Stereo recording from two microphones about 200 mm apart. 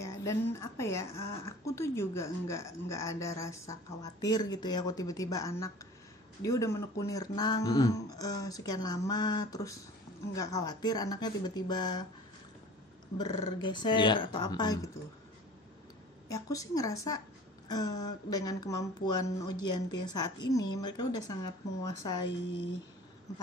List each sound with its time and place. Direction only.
0.0 s speech: 15° left (ahead or behind)
13.2 s speech: 20° left (ahead or behind)
16.3 s speech: 15° left (ahead or behind)